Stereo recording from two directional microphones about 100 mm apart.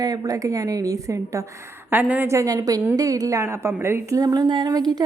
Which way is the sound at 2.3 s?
35° right (ahead or behind).